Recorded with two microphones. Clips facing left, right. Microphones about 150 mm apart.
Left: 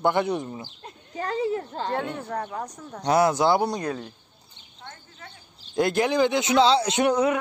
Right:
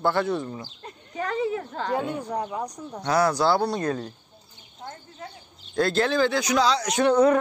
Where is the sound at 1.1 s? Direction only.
35° left (ahead or behind).